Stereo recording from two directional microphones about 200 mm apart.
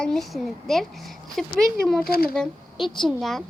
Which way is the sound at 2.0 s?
50° left (ahead or behind).